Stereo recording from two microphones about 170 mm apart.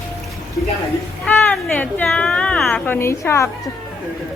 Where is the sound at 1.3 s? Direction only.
10° left (ahead or behind).